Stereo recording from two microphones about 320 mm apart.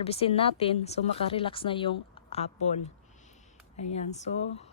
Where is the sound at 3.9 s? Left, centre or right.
Left.